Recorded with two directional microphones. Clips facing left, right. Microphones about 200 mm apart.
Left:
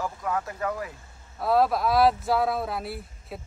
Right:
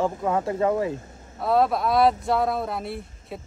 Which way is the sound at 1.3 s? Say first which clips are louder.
Right 1 dB; centre (ahead or behind).